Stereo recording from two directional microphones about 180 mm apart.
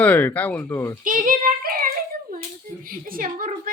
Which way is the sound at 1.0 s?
50° right (ahead or behind).